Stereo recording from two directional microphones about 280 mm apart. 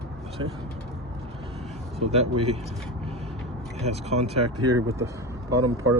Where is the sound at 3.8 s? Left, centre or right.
Right.